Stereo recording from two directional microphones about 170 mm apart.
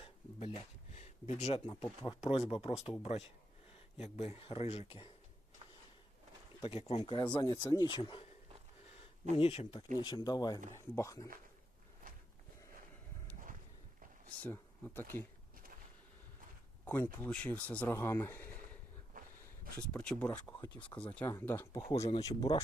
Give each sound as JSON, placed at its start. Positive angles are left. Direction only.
{"t": 0.0, "sound": "a sound", "side_deg": 35}
{"t": 1.6, "sound": "speech", "side_deg": 30}
{"t": 6.6, "sound": "speech", "side_deg": 35}
{"t": 7.0, "sound": "speech", "side_deg": 25}
{"t": 9.3, "sound": "speech", "side_deg": 35}
{"t": 12.0, "sound": "a sound", "side_deg": -55}
{"t": 14.4, "sound": "speech", "side_deg": 10}
{"t": 16.8, "sound": "speech", "side_deg": 10}
{"t": 19.1, "sound": "a sound", "side_deg": -55}
{"t": 19.9, "sound": "speech", "side_deg": 5}
{"t": 20.9, "sound": "speech", "side_deg": 20}
{"t": 21.8, "sound": "speech", "side_deg": 40}
{"t": 22.1, "sound": "speech", "side_deg": 20}